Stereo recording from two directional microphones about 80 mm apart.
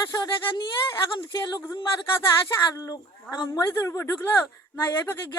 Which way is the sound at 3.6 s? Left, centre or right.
Left.